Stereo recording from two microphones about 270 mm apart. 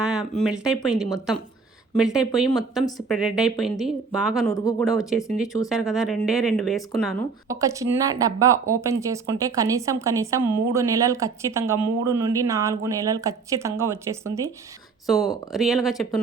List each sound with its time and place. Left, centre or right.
0.0 s speech: centre
2.0 s speech: centre
4.5 s speech: centre
5.0 s speech: centre
7.4 s speech: centre
15.5 s speech: centre